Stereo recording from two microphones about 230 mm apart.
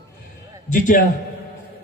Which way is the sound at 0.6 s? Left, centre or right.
Left.